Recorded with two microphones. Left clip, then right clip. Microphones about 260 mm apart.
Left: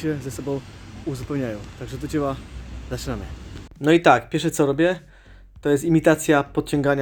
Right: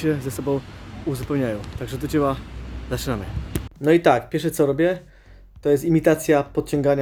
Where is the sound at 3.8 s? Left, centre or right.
Centre.